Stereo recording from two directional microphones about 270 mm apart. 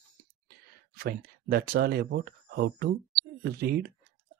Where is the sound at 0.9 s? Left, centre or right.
Right.